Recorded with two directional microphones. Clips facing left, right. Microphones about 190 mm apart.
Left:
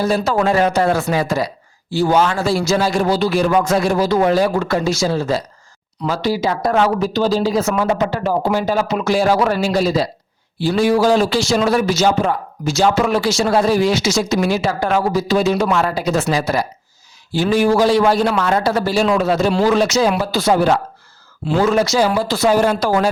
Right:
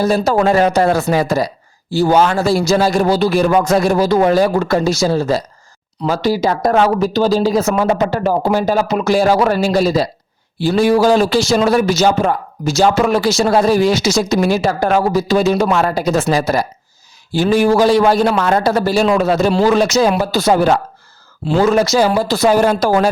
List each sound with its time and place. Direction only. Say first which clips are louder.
0.0 s a man's voice: right 3 dB; 40° right (ahead or behind)